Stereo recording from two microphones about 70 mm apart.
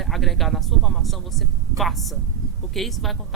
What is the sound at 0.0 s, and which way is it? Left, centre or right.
Speech, centre.